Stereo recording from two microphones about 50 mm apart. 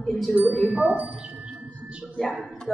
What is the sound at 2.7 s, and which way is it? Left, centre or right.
Speech, centre.